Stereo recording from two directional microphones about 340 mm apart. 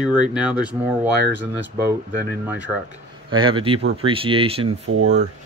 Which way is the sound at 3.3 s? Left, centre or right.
Centre.